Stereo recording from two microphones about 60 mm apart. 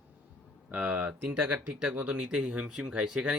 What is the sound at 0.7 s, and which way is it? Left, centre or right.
Speech, right.